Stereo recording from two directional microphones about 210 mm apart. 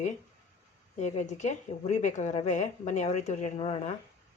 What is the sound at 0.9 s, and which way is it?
A woman's voice, 35° left (ahead or behind).